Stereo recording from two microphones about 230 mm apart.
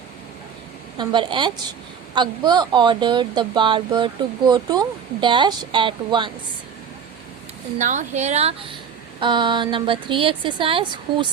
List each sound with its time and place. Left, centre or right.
0.9 s speech: centre
7.8 s speech: right